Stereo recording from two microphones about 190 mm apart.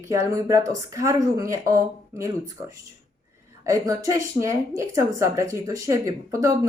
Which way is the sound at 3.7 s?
15° right (ahead or behind).